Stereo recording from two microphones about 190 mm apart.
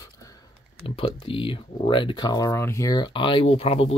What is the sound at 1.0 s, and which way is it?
Speech, 30° left (ahead or behind).